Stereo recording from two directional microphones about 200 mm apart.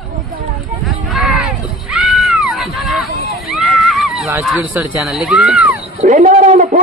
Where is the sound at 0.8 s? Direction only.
Centre (ahead or behind).